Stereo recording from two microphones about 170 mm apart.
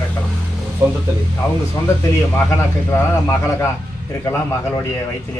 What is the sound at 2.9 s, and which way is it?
Speech, 15° left (ahead or behind).